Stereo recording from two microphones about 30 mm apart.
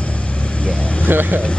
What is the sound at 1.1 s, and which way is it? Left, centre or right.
Speech, right.